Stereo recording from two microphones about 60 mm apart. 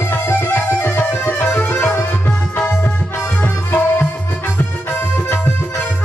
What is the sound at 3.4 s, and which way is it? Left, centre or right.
Music, left.